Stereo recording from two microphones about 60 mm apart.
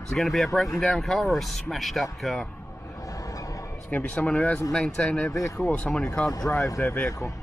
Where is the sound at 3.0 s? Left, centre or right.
Left.